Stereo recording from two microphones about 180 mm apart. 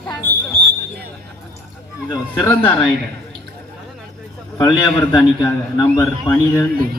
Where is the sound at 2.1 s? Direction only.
20° left (ahead or behind).